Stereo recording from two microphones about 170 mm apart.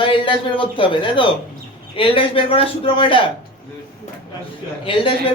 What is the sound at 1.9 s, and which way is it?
Speech, 30° left (ahead or behind).